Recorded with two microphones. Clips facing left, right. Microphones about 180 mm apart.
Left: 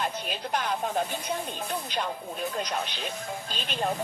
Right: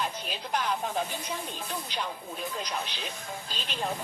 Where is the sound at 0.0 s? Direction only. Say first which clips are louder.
Left 3 dB; 50° left (ahead or behind).